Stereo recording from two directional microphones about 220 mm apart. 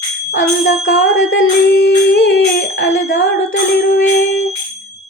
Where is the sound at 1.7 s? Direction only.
50° left (ahead or behind).